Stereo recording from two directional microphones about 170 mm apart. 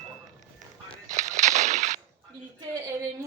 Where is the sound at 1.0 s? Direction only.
45° right (ahead or behind).